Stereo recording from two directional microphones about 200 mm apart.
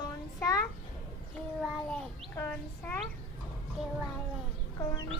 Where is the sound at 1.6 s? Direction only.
5° left (ahead or behind).